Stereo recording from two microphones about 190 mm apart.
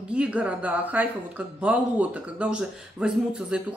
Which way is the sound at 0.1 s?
5° right (ahead or behind).